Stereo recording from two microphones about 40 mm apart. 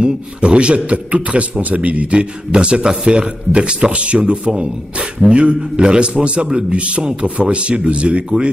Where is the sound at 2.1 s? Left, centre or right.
Right.